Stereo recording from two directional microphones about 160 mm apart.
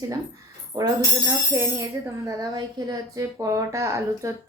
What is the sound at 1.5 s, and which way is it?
Speech, 20° right (ahead or behind).